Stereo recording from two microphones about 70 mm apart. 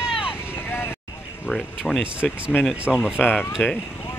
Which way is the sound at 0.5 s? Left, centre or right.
Left.